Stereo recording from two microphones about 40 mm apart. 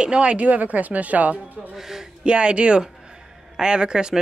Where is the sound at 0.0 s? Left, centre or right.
Right.